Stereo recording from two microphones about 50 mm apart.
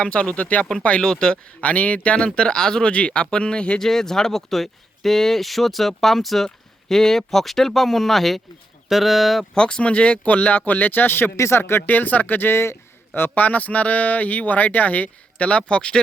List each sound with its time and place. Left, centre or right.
0.0 s speech: left
1.6 s speech: left
3.8 s speech: centre
9.6 s speech: centre; by 11.3 s left
11.3 s speech: left
11.9 s speech: left; by 16.0 s centre